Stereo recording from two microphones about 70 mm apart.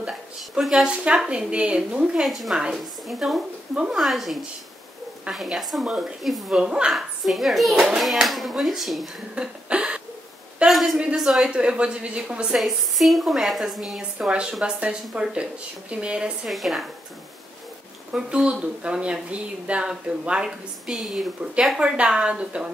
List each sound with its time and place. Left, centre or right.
0.4 s a child's voice: centre
9.3 s a sound: centre
10.7 s a sound: centre
11.1 s speech: centre
12.5 s a child's voice: centre
16.4 s a child's voice: centre
18.1 s speech: centre